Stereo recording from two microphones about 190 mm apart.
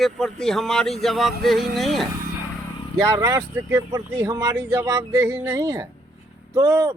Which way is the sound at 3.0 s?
20° right (ahead or behind).